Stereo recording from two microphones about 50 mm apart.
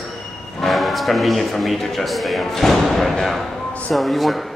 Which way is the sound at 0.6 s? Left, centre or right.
Centre.